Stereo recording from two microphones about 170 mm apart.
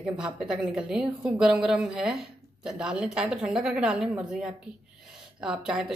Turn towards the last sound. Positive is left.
turn(degrees=-5)  # may be behind; listen again after turning